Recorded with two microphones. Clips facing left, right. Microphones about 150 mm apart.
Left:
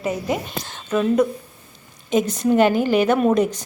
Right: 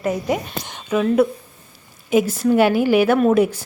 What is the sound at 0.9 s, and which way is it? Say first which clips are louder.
A woman's voice: right 1 dB; 5° right (ahead or behind).